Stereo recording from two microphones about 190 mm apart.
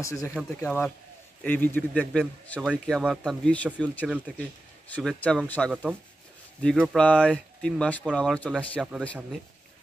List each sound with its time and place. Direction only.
0.0 s a man's voice: 15° left (ahead or behind)
5.7 s a man's voice: 5° right (ahead or behind)